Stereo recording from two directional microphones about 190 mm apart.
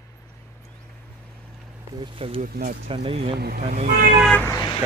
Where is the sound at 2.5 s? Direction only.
50° right (ahead or behind).